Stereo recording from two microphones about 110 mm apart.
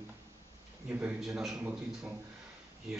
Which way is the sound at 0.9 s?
15° right (ahead or behind).